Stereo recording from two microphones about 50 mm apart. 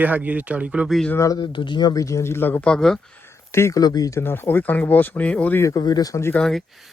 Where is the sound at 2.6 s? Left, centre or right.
Centre.